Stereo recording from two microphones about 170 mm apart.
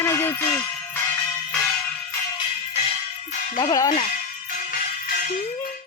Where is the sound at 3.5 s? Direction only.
20° left (ahead or behind).